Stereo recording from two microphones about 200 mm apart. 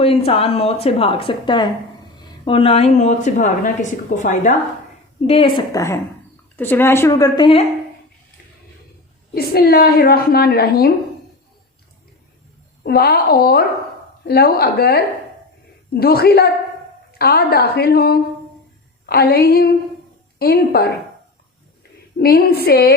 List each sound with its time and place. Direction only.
0.0 s speech: 30° left (ahead or behind)
5.2 s a woman's voice: 30° left (ahead or behind)
9.3 s a woman's voice: 50° left (ahead or behind)
12.8 s a woman's voice: 50° left (ahead or behind)
22.2 s a woman's voice: 50° left (ahead or behind)